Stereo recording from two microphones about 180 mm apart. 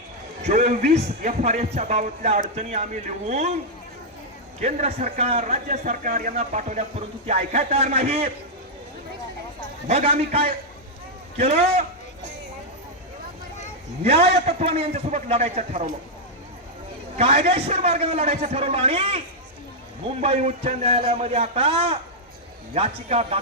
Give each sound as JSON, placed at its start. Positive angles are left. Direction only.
{"t": 0.4, "sound": "speech", "side_deg": -40}
{"t": 4.6, "sound": "speech", "side_deg": -35}
{"t": 9.8, "sound": "speech", "side_deg": -35}
{"t": 14.0, "sound": "speech", "side_deg": -35}
{"t": 17.2, "sound": "speech", "side_deg": -35}
{"t": 20.2, "sound": "speech", "side_deg": -35}